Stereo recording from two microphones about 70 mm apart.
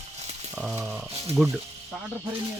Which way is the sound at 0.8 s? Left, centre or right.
Centre.